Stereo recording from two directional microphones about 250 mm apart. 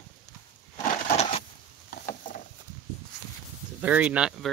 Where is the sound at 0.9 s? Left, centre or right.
Left.